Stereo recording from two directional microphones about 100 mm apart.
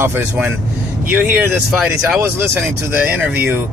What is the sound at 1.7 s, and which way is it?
Speech, 5° right (ahead or behind).